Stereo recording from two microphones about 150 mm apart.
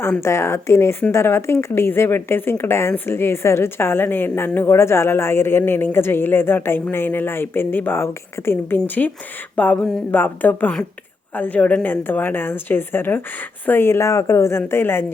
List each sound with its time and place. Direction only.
0.0 s speech: 15° left (ahead or behind)